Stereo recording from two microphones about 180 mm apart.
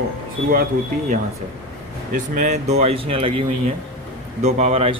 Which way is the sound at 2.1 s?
45° right (ahead or behind).